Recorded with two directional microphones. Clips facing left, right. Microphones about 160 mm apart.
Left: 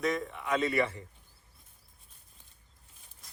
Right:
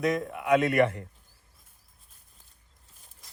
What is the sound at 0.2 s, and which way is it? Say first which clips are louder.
Speech: right 7 dB; 50° right (ahead or behind).